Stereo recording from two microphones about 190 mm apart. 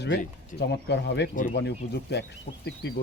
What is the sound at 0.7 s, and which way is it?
Speech, 65° left (ahead or behind).